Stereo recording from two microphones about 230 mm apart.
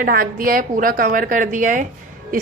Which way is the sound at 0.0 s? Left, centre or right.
Right.